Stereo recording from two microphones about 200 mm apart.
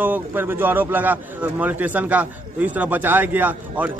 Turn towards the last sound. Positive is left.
turn(degrees=-10)  # may be behind; listen again after turning